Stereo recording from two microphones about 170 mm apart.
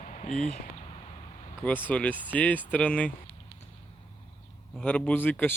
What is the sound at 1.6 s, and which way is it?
Speech, 10° left (ahead or behind).